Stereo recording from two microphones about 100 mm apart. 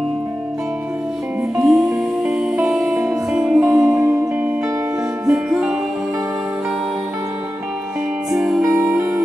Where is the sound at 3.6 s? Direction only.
25° right (ahead or behind).